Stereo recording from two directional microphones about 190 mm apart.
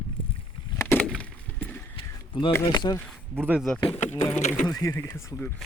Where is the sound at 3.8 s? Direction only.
30° left (ahead or behind).